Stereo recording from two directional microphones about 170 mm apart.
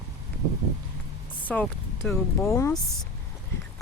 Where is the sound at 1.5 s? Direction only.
10° left (ahead or behind).